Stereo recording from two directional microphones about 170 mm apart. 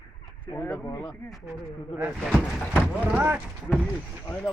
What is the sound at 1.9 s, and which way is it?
Speech, 10° right (ahead or behind).